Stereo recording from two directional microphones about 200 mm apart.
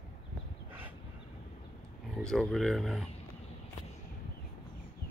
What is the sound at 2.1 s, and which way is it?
Speech, centre (ahead or behind).